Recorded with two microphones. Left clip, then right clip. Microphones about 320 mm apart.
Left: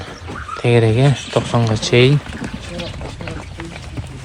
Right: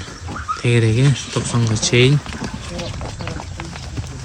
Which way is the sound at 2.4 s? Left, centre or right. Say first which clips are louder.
Even; right.